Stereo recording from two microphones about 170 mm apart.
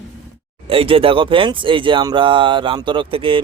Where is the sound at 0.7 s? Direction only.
35° right (ahead or behind).